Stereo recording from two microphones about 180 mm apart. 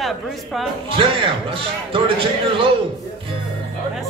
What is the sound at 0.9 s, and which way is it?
Speech, 30° right (ahead or behind).